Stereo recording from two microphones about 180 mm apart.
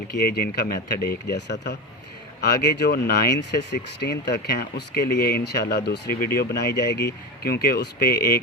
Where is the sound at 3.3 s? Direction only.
70° left (ahead or behind).